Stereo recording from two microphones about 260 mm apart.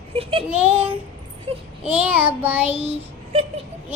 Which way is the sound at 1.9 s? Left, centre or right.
Centre.